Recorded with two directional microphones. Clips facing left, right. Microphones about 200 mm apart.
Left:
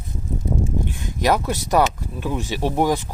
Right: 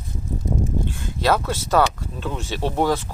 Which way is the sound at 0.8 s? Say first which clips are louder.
Left 1 dB; 15° left (ahead or behind).